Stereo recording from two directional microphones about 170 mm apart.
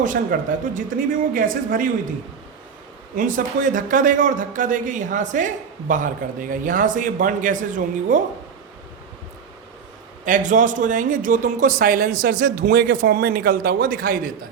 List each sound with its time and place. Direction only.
0.0 s a man's voice: 50° right (ahead or behind)
3.2 s a man's voice: 50° right (ahead or behind)
10.2 s a man's voice: 50° right (ahead or behind)
12.6 s a man's voice: 65° right (ahead or behind)